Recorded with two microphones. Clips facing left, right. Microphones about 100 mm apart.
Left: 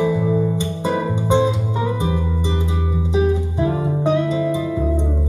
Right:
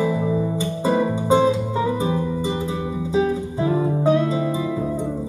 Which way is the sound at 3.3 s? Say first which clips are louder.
Left 2 dB; 20° left (ahead or behind).